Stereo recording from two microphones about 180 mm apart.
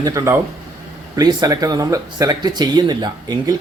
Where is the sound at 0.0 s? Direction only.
20° right (ahead or behind).